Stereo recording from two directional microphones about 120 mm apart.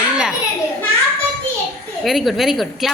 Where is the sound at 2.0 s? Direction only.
Centre (ahead or behind).